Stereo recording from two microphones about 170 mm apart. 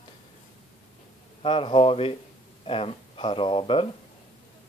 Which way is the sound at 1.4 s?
30° left (ahead or behind).